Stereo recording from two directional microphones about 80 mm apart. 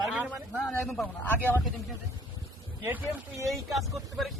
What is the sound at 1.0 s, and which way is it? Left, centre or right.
Speech, left.